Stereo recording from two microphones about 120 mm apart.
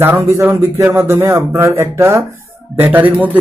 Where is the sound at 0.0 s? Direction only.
20° right (ahead or behind).